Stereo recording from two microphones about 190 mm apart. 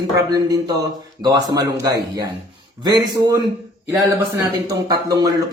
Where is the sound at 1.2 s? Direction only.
20° right (ahead or behind).